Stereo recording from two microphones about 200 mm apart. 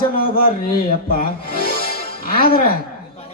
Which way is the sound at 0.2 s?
45° left (ahead or behind).